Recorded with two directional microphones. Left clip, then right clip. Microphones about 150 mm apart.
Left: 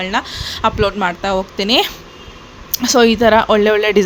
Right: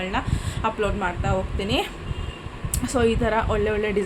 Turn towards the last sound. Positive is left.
turn(degrees=90)